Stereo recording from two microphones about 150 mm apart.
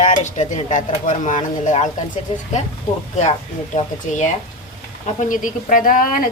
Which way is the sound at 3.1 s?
50° left (ahead or behind).